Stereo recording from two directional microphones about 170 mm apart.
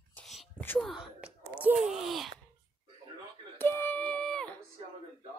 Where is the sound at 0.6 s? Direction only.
10° left (ahead or behind).